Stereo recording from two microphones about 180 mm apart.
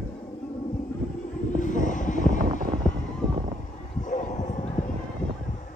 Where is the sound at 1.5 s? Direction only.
45° left (ahead or behind).